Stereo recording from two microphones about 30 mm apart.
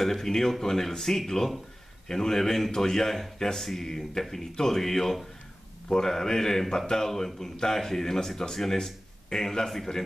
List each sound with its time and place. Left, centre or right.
0.0 s speech: centre